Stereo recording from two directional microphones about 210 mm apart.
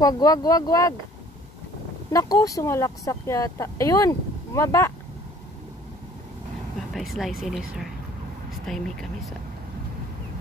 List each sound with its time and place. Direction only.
0.0 s speech: 15° left (ahead or behind)
2.0 s speech: 15° left (ahead or behind)
6.9 s speech: centre (ahead or behind)
8.6 s speech: centre (ahead or behind)